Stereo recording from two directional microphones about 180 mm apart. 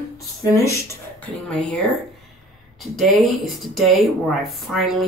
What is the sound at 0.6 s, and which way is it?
Speech, 15° left (ahead or behind).